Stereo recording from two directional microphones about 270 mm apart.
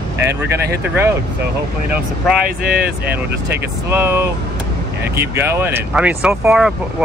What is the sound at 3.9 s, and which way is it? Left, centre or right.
Speech, centre.